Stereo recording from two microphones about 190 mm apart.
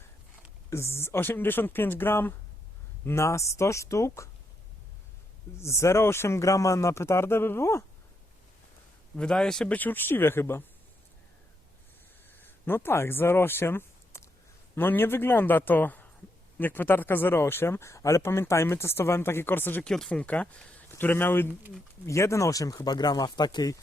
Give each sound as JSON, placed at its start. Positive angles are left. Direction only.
{"t": 0.7, "sound": "speech", "side_deg": 15}
{"t": 5.5, "sound": "speech", "side_deg": 15}
{"t": 9.1, "sound": "speech", "side_deg": 5}
{"t": 12.4, "sound": "speech", "side_deg": 10}